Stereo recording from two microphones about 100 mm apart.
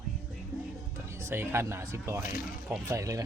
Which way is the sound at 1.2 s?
25° right (ahead or behind).